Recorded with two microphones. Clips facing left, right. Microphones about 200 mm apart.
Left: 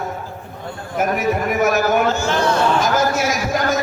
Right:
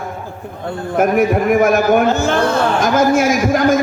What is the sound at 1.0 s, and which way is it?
A man's voice, 55° right (ahead or behind).